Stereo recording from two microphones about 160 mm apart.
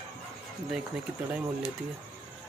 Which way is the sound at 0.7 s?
5° right (ahead or behind).